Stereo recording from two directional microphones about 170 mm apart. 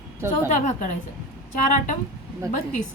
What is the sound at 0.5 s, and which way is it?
Speech, 45° left (ahead or behind).